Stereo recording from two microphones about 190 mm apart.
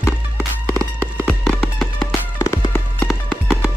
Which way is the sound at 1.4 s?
Centre (ahead or behind).